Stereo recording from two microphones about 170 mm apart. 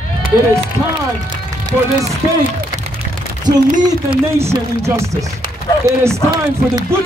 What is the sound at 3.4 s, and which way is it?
A man's voice, 25° right (ahead or behind).